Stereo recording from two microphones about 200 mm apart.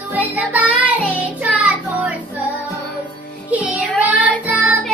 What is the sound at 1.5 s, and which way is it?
Child singing, 5° right (ahead or behind).